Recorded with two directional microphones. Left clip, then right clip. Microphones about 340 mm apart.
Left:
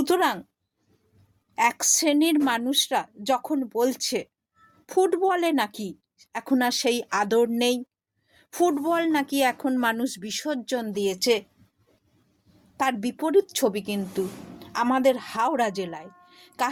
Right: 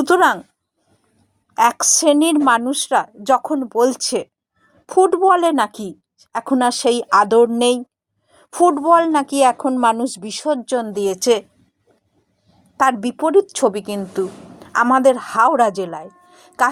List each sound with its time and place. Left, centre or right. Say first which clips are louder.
0.0 s a woman's voice: right 9 dB; left
1.6 s a woman's voice: right 8 dB; left
12.7 s a woman's voice: right 9 dB; left